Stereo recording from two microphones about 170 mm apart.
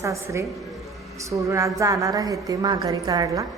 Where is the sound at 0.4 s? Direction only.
Centre (ahead or behind).